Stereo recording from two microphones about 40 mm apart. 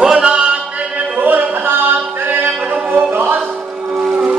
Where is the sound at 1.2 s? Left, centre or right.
Right.